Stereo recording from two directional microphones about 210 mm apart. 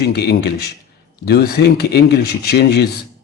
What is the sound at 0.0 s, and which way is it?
Speech, 50° left (ahead or behind).